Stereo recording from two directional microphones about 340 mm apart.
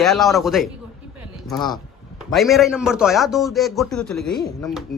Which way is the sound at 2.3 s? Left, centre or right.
Centre.